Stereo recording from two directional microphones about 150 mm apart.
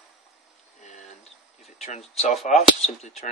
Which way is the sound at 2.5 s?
50° left (ahead or behind).